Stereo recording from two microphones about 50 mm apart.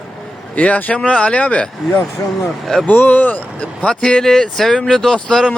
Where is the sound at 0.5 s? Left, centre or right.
Left.